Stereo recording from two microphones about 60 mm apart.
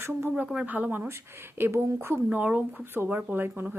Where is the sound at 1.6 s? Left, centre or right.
Right.